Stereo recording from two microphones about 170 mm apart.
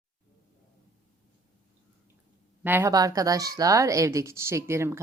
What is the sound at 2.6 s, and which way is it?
Speech, 15° right (ahead or behind).